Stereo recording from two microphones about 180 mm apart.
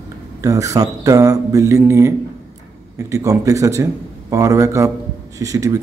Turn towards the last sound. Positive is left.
turn(degrees=-20)  # may be behind; listen again after turning